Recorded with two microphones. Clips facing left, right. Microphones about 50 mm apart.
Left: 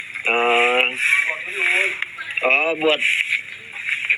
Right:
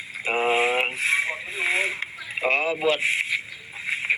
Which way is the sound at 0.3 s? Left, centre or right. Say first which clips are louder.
Left 5 dB; left.